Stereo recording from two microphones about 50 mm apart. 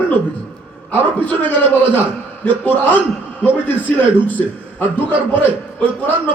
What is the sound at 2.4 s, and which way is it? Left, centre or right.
Speech, left.